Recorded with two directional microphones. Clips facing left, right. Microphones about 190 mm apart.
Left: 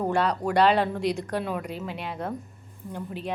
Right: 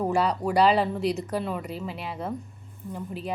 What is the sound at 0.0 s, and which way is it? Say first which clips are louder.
A woman's voice: even; 5° right (ahead or behind).